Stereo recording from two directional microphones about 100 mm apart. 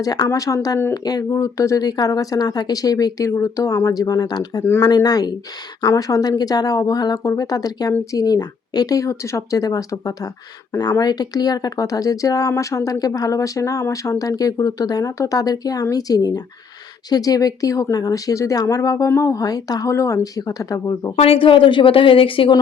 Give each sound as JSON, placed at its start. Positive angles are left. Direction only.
{"t": 0.0, "sound": "speech", "side_deg": 40}
{"t": 21.2, "sound": "speech", "side_deg": 65}